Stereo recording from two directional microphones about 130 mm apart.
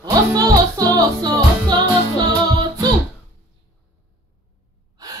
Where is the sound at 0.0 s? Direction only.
30° right (ahead or behind).